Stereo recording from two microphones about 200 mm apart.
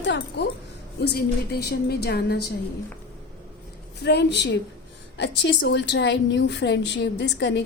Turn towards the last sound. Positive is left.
turn(degrees=60)  # may be behind; listen again after turning